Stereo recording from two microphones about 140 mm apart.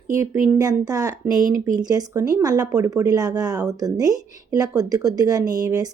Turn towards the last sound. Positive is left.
turn(degrees=-25)  # may be behind; listen again after turning